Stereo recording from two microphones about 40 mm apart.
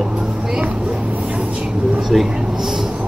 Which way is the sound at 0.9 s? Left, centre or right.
Right.